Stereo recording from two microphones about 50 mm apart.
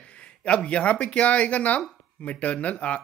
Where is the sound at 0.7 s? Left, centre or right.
Left.